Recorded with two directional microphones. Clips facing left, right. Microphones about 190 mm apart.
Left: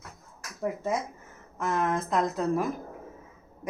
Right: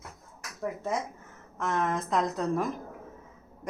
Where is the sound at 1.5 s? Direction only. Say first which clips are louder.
Left 1 dB; 5° left (ahead or behind).